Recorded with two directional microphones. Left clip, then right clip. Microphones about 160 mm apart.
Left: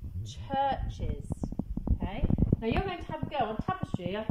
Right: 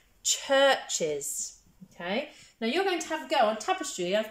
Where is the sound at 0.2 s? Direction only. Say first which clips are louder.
Right 8 dB; 40° right (ahead or behind).